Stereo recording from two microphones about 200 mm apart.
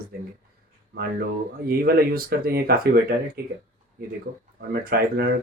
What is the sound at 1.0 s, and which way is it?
Speech, 50° right (ahead or behind).